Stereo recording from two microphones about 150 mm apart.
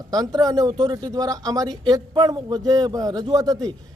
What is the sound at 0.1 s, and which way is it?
A man's voice, 25° right (ahead or behind).